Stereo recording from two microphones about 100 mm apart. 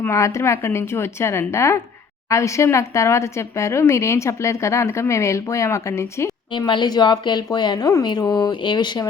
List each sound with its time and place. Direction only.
0.0 s speech: 30° left (ahead or behind)
6.5 s speech: 55° left (ahead or behind)